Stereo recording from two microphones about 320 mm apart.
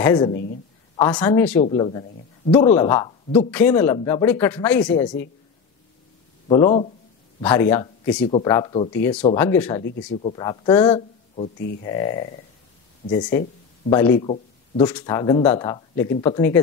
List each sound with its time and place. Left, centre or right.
0.0 s speech: centre
0.3 s speech: left
0.9 s speech: centre
1.6 s speech: centre
6.5 s speech: centre
9.8 s speech: left
10.2 s speech: centre